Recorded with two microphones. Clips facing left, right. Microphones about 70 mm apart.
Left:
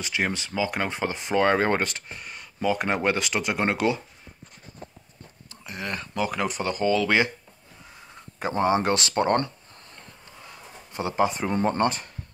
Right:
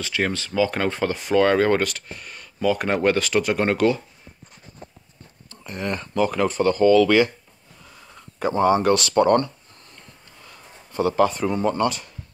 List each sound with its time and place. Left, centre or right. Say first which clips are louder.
0.0 s speech: right 3 dB; centre
5.6 s speech: right 5 dB; centre; by 9.5 s left
10.9 s speech: right 5 dB; centre
11.5 s speech: right 2 dB; left